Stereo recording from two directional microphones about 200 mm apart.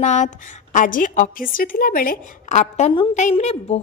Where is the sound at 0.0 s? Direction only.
35° left (ahead or behind).